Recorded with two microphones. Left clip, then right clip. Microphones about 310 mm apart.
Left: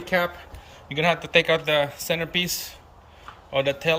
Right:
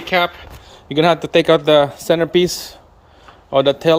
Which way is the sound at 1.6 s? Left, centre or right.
Right.